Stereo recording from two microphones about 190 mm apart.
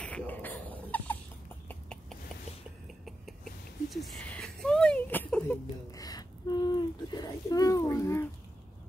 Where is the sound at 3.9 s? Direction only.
Centre (ahead or behind).